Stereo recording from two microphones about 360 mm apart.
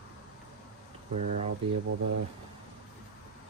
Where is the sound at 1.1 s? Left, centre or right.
Centre.